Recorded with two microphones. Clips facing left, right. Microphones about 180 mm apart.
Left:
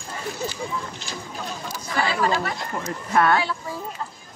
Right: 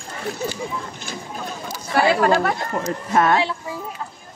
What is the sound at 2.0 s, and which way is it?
Speech, 50° right (ahead or behind).